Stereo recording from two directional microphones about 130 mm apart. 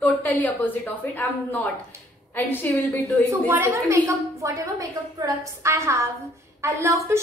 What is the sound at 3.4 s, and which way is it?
A woman's voice, 15° right (ahead or behind).